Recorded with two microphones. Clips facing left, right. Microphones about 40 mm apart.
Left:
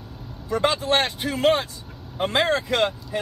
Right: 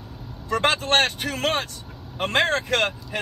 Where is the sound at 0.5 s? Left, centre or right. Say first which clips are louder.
Even; right.